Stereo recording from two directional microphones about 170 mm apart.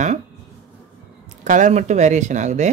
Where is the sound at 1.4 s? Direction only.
45° right (ahead or behind).